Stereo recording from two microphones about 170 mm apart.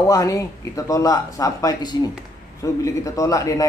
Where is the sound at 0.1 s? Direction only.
20° left (ahead or behind).